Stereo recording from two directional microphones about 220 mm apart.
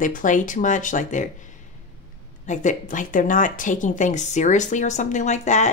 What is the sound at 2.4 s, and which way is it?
Speech, 35° left (ahead or behind).